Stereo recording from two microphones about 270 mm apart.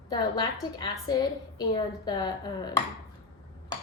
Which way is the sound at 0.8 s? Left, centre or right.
Centre.